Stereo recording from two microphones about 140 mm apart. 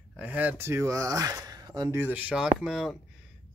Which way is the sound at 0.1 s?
10° right (ahead or behind).